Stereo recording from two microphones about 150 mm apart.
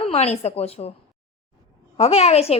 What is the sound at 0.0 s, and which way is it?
Speech, 45° left (ahead or behind).